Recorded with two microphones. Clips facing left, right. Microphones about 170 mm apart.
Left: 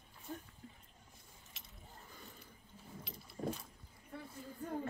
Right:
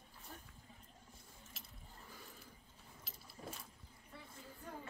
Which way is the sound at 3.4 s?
45° left (ahead or behind).